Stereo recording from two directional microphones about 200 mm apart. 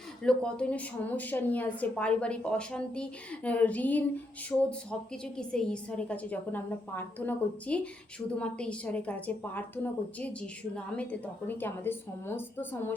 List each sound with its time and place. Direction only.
0.2 s a woman's voice: 5° left (ahead or behind)